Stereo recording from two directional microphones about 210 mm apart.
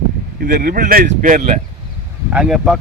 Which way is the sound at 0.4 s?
45° right (ahead or behind).